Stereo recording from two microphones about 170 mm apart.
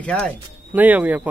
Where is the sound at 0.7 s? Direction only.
10° right (ahead or behind).